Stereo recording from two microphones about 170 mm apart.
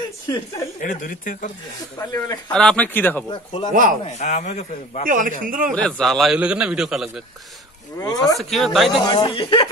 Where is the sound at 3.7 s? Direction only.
50° right (ahead or behind).